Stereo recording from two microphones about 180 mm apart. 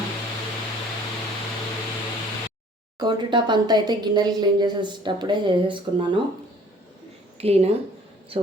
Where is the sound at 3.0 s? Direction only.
25° right (ahead or behind).